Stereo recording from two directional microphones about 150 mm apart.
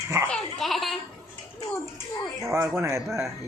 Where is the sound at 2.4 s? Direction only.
20° right (ahead or behind).